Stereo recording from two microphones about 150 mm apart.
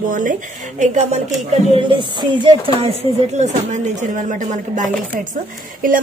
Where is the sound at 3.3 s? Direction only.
50° right (ahead or behind).